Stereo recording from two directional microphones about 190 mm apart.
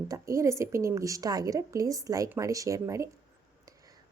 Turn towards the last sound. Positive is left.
turn(degrees=-15)  # may be behind; listen again after turning